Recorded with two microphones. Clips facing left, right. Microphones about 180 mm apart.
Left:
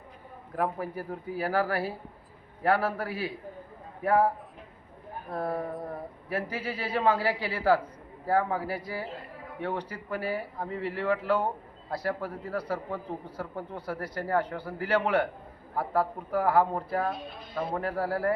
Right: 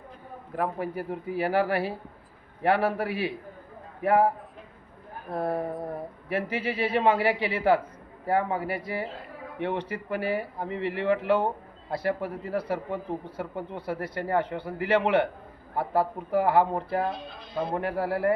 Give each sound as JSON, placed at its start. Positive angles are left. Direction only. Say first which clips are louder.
{"t": 0.8, "sound": "a man's voice", "louder": "right 3 dB", "side_deg": -25}
{"t": 5.3, "sound": "a man's voice", "louder": "right 3 dB", "side_deg": -25}